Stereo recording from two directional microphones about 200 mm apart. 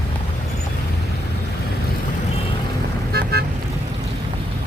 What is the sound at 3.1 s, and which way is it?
Vehicle, 50° right (ahead or behind).